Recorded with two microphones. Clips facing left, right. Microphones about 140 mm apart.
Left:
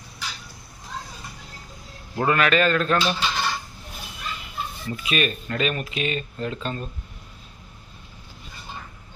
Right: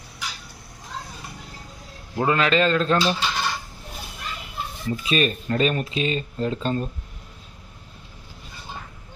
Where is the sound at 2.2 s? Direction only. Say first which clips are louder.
Even; 25° right (ahead or behind).